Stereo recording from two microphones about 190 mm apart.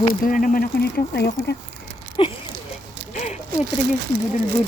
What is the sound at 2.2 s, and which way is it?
Speech, 25° left (ahead or behind).